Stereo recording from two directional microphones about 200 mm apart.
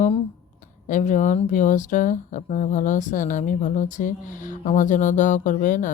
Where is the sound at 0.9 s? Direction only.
40° left (ahead or behind).